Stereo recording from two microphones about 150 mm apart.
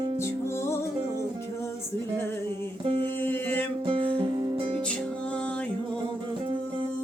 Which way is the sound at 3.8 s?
35° right (ahead or behind).